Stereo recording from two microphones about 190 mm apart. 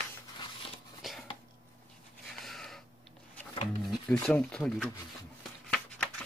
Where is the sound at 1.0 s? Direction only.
Centre (ahead or behind).